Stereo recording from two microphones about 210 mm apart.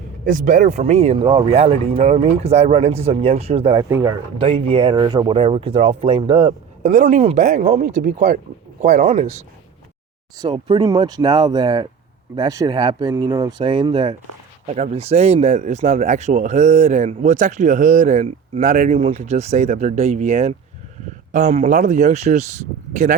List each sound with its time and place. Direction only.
0.3 s speech: 40° right (ahead or behind)
3.8 s speech: 10° right (ahead or behind)
4.4 s speech: 25° right (ahead or behind)
6.9 s speech: 35° right (ahead or behind)
10.3 s speech: 20° right (ahead or behind)
14.7 s speech: 30° right (ahead or behind)